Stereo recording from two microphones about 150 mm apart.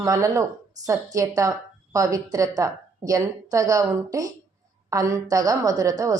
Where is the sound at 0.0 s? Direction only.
20° right (ahead or behind).